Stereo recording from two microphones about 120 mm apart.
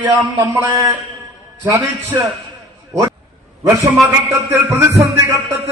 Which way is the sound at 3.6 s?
30° right (ahead or behind).